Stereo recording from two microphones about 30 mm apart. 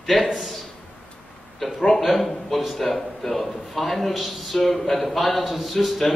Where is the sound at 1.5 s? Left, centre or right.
Centre.